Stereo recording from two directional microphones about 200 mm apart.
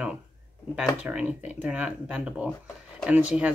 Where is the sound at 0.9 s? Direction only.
5° right (ahead or behind).